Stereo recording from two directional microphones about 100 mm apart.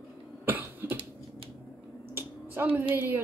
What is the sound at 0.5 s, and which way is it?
Cough, 20° right (ahead or behind).